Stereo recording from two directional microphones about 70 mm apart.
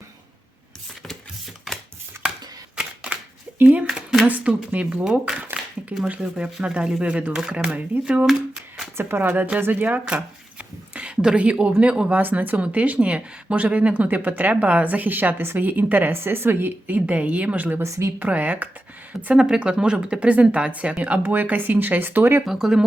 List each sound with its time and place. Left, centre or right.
2.7 s camera: centre
3.6 s a sound: centre
4.3 s speech: right
9.0 s speech: right
9.2 s speech: right
17.8 s a woman's voice: right
18.2 s speech: right
22.4 s speech: centre